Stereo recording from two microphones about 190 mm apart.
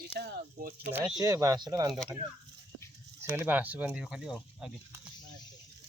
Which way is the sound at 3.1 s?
10° right (ahead or behind).